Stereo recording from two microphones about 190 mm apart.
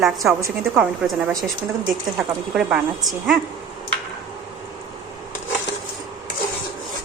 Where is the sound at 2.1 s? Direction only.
5° right (ahead or behind).